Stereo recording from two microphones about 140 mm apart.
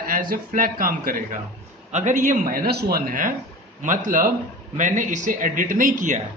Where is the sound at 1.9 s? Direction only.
60° right (ahead or behind).